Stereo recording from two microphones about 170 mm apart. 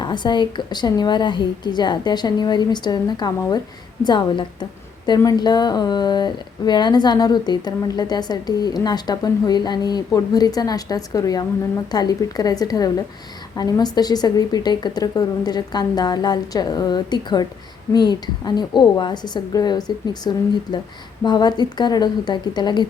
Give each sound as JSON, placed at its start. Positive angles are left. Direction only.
{"t": 0.0, "sound": "speech", "side_deg": 25}